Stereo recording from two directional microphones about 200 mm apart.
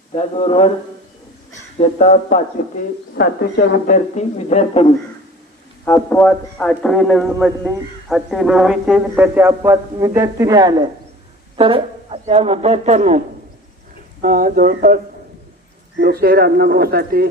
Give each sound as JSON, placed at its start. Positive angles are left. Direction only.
{"t": 0.1, "sound": "speech", "side_deg": 30}
{"t": 2.0, "sound": "speech", "side_deg": 30}
{"t": 3.2, "sound": "speech", "side_deg": 50}
{"t": 5.8, "sound": "a man's voice", "side_deg": 10}